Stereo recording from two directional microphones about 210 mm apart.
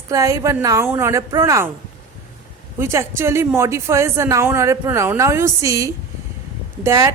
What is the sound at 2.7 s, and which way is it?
A woman's voice, 10° right (ahead or behind).